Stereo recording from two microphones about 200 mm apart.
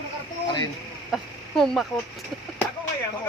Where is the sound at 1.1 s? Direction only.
Centre (ahead or behind).